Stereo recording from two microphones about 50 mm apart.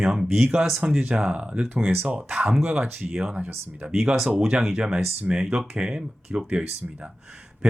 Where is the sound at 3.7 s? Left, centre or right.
Right.